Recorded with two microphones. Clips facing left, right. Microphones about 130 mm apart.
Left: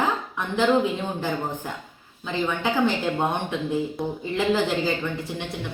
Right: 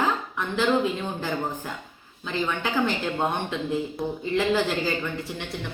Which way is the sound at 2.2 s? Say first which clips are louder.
Left 2 dB; 15° left (ahead or behind).